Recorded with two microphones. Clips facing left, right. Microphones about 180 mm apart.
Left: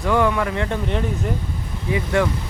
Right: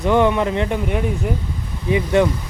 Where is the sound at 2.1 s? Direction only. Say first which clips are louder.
Right 4 dB; 20° right (ahead or behind).